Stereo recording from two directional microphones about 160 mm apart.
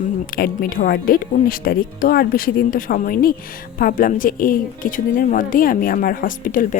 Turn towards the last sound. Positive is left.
turn(degrees=60)  # may be behind; listen again after turning